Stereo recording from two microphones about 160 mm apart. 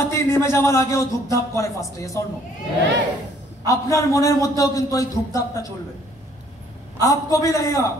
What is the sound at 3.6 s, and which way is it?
A man's voice, 20° left (ahead or behind).